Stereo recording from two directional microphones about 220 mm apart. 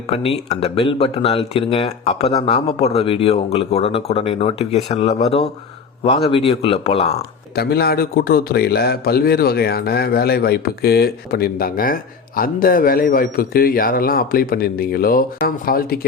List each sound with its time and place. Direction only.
0.1 s speech: 25° left (ahead or behind)
7.5 s a man's voice: 45° left (ahead or behind)